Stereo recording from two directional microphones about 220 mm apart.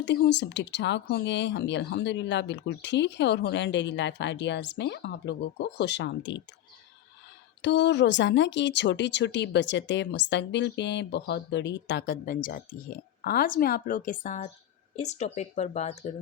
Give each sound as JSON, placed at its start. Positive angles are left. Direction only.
{"t": 0.0, "sound": "speech", "side_deg": 50}
{"t": 7.6, "sound": "speech", "side_deg": 50}